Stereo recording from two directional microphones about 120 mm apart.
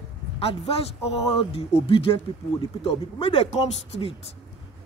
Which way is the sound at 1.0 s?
55° left (ahead or behind).